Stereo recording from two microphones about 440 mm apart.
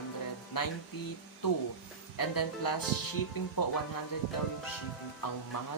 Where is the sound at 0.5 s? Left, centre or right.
Left.